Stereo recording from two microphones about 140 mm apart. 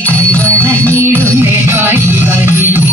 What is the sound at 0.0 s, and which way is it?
Music, 10° left (ahead or behind).